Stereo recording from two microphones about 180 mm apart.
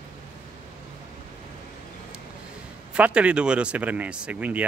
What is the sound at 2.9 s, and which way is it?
Speech, 5° right (ahead or behind).